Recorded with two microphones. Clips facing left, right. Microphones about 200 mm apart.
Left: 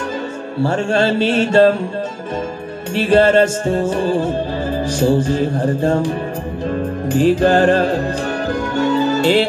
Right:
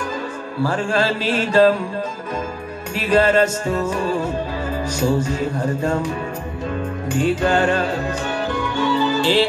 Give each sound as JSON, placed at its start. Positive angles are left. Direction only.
{"t": 0.6, "sound": "music", "side_deg": 30}
{"t": 2.9, "sound": "music", "side_deg": 30}